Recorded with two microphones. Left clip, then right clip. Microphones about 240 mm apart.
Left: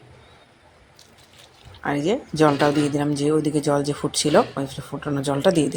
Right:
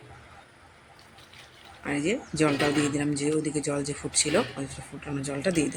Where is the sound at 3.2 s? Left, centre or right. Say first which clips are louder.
Left 7 dB; left.